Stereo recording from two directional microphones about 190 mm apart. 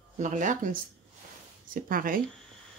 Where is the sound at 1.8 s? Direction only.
50° right (ahead or behind).